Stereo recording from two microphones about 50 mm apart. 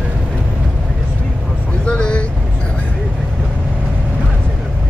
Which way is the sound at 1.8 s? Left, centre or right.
Centre.